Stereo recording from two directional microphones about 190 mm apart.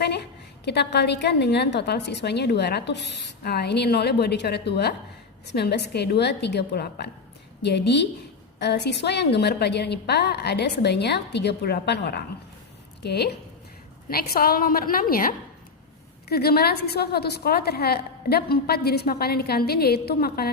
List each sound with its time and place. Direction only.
0.0 s a woman's voice: 60° left (ahead or behind)